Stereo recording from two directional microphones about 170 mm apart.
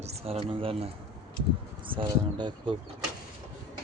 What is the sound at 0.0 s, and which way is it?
Speech, 35° right (ahead or behind).